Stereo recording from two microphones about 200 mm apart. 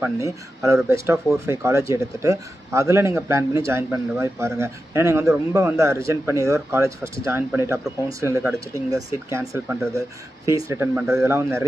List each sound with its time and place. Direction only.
0.8 s speech: 15° right (ahead or behind)